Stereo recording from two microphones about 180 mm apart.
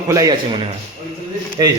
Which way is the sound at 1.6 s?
20° right (ahead or behind).